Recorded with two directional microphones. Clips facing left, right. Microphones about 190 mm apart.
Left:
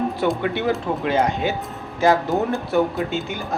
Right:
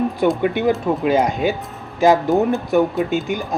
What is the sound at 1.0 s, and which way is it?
Speech, 15° right (ahead or behind).